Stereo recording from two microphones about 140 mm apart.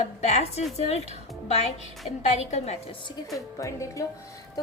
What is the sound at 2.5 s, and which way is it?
Speech, 50° left (ahead or behind).